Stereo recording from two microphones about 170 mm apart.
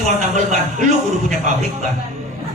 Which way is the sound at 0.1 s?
45° right (ahead or behind).